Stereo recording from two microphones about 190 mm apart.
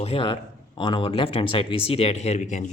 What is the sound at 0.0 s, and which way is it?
A man's voice, 30° left (ahead or behind).